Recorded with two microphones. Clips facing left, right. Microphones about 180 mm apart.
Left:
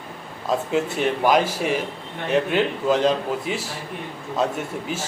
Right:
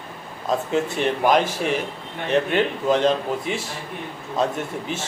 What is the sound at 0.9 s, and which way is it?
A man's voice, 5° left (ahead or behind).